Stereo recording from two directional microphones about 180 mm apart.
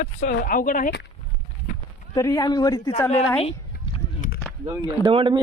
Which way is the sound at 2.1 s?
20° left (ahead or behind).